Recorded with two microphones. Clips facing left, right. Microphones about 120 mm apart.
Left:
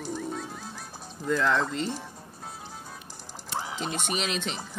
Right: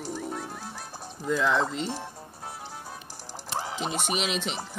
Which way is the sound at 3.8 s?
5° right (ahead or behind).